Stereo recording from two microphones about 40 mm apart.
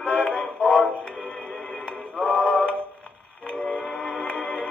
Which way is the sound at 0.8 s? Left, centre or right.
Left.